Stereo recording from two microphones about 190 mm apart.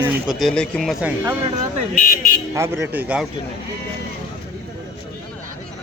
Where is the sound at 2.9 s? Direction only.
5° right (ahead or behind).